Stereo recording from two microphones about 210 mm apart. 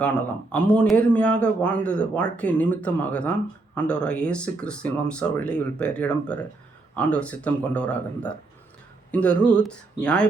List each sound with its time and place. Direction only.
0.0 s speech: 5° left (ahead or behind)